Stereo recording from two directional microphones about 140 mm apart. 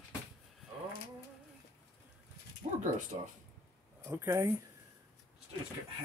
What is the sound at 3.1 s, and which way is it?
Speech, 40° right (ahead or behind).